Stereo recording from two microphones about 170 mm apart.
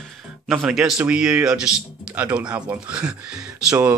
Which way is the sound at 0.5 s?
Centre (ahead or behind).